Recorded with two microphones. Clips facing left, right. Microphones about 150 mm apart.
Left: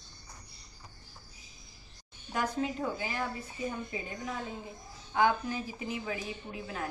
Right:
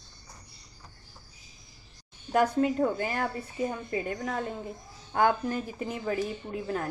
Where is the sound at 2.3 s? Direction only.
55° right (ahead or behind).